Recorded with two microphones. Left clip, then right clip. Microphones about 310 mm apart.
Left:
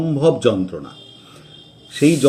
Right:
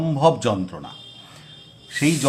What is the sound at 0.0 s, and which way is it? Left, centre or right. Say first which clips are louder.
Speech: left 3 dB; centre.